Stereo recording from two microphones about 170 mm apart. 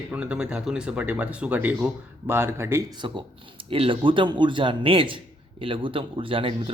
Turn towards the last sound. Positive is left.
turn(degrees=-30)  # may be behind; listen again after turning